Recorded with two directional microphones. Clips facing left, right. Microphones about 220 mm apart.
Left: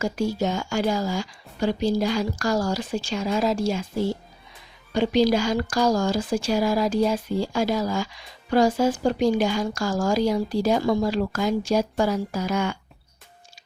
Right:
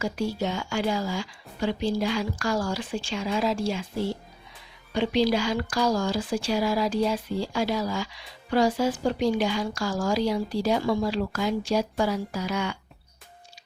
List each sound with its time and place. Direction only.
0.0 s speech: 45° left (ahead or behind)
4.9 s speech: 45° left (ahead or behind)